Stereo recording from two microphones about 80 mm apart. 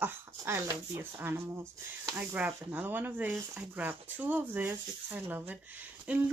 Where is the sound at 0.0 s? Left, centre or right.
Right.